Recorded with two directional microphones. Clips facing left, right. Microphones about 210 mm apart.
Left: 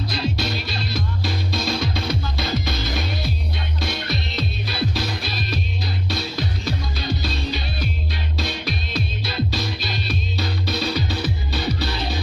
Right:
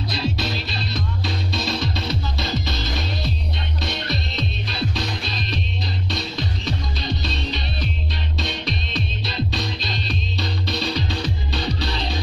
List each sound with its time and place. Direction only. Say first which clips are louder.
0.2 s music: even; centre (ahead or behind)